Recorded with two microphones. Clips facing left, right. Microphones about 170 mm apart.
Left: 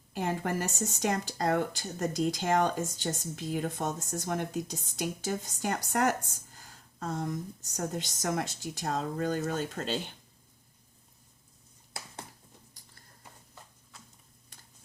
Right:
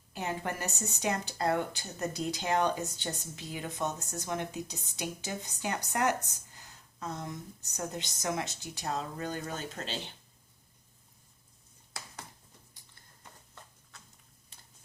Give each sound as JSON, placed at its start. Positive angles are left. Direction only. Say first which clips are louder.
{"t": 0.2, "sound": "speech", "louder": "left 4 dB", "side_deg": 50}